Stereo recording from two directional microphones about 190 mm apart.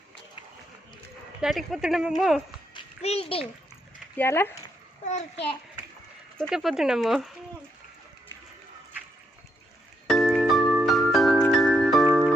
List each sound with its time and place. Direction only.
1.4 s speech: centre (ahead or behind)
2.7 s a sound: 30° left (ahead or behind)
4.2 s speech: 10° left (ahead or behind)
5.0 s a child's voice: 35° left (ahead or behind)
6.5 s speech: centre (ahead or behind)
10.1 s glockenspiel: centre (ahead or behind)